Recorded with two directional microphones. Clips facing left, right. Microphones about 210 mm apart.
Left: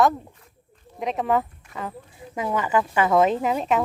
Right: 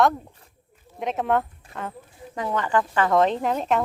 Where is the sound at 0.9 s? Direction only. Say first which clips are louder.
Even; centre (ahead or behind).